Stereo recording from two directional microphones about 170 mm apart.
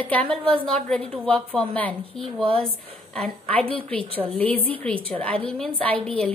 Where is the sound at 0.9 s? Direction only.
5° left (ahead or behind).